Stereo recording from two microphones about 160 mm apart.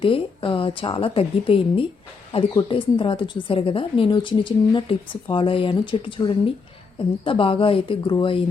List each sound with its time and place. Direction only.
0.0 s a woman's voice: 35° left (ahead or behind)